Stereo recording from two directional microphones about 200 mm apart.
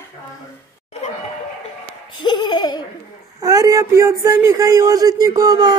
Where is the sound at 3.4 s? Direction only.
15° right (ahead or behind).